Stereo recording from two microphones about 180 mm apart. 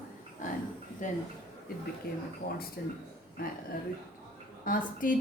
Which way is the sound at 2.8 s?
60° left (ahead or behind).